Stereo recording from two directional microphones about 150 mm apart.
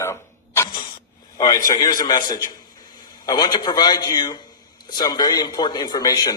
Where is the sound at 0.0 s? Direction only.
15° left (ahead or behind).